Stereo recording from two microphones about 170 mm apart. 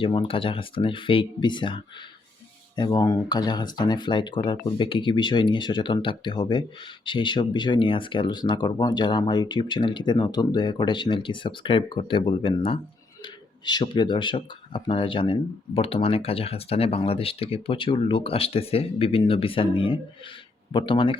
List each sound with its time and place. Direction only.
0.0 s speech: 30° left (ahead or behind)